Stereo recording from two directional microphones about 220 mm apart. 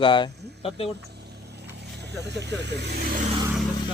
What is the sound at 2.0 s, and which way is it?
Speech, 50° right (ahead or behind).